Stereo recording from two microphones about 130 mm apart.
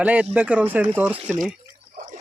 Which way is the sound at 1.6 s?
90° right.